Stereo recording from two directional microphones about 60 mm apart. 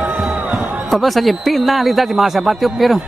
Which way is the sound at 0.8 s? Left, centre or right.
Centre.